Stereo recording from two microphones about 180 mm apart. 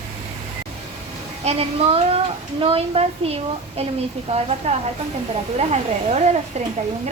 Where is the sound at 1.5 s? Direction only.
35° right (ahead or behind).